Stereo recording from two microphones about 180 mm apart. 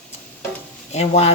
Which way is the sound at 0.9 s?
40° left (ahead or behind).